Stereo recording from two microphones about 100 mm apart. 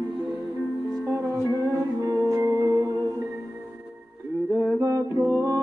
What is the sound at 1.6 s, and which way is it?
Music, 35° right (ahead or behind).